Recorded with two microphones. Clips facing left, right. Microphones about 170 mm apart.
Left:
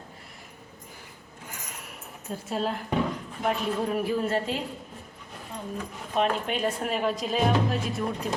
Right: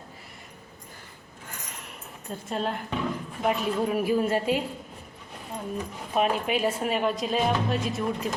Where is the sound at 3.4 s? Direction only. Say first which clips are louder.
Right 2 dB; 10° right (ahead or behind).